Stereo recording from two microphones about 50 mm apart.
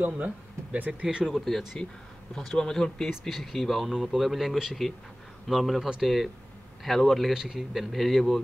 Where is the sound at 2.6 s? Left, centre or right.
Centre.